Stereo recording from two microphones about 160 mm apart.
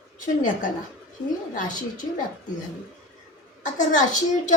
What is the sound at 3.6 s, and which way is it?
Speech, 50° left (ahead or behind).